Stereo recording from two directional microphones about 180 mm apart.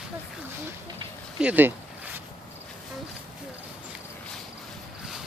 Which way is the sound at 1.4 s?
10° right (ahead or behind).